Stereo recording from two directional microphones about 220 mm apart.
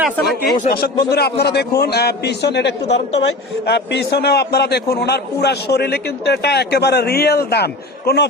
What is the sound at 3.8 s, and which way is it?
A man's voice, 50° left (ahead or behind).